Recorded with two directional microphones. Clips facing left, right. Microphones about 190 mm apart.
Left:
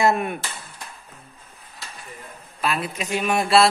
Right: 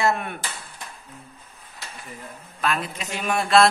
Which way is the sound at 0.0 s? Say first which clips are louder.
Left 3 dB; 20° left (ahead or behind).